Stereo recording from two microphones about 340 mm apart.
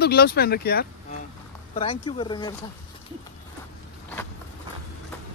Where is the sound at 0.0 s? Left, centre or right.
Left.